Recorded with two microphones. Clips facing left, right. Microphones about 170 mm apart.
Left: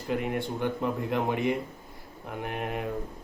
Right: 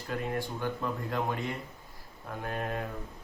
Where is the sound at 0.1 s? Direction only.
20° left (ahead or behind).